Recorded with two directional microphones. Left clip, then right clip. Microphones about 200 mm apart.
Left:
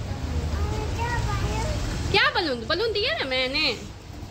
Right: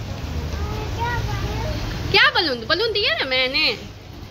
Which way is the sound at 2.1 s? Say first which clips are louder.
Right 5 dB; centre (ahead or behind).